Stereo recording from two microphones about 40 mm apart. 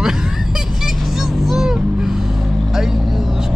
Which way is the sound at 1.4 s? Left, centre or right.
Centre.